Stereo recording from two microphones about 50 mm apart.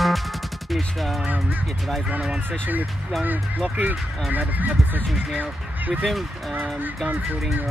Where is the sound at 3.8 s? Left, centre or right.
Right.